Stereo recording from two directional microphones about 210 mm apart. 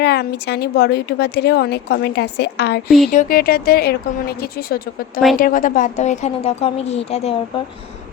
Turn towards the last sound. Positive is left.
turn(degrees=25)  # may be behind; listen again after turning